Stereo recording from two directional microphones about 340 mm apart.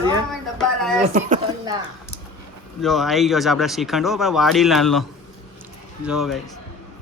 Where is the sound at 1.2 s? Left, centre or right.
Right.